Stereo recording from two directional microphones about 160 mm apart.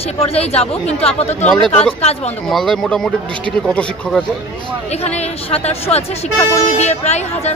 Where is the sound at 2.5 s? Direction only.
Centre (ahead or behind).